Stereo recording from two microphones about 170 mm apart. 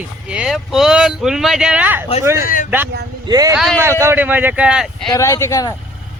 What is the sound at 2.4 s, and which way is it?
Speech, 55° left (ahead or behind).